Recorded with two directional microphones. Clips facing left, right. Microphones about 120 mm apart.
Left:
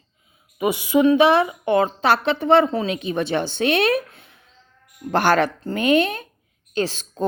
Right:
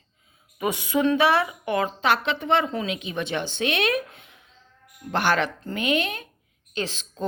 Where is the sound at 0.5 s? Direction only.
15° left (ahead or behind).